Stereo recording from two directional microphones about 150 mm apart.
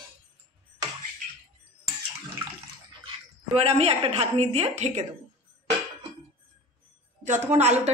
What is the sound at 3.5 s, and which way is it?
A woman's voice, 40° right (ahead or behind).